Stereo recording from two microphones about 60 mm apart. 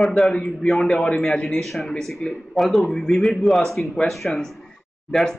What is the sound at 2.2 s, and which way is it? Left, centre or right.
Speech, left.